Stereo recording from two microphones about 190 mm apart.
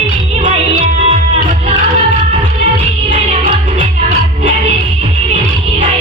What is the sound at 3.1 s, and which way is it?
Music, 30° right (ahead or behind).